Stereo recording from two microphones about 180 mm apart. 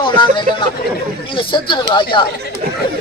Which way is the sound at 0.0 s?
25° left (ahead or behind).